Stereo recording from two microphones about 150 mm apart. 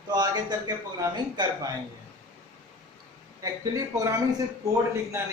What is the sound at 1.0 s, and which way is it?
Speech, 30° right (ahead or behind).